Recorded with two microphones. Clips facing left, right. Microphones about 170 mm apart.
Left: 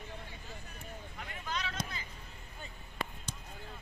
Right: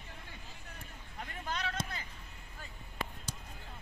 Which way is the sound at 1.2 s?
45° right (ahead or behind).